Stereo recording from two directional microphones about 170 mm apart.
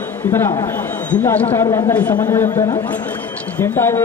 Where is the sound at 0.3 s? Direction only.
15° left (ahead or behind).